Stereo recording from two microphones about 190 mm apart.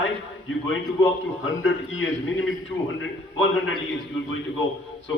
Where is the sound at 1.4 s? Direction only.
90° left.